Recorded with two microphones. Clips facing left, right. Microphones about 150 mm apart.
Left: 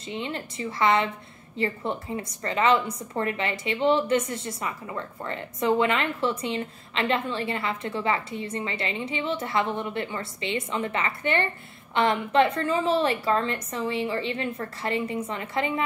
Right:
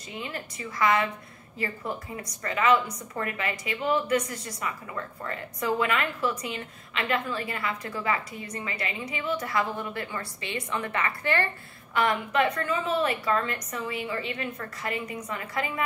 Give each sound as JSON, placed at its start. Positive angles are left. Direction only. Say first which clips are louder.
{"t": 0.1, "sound": "a woman's voice", "louder": "left 4 dB", "side_deg": 25}